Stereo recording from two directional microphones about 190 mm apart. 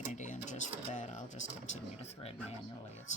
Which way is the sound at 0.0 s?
40° left (ahead or behind).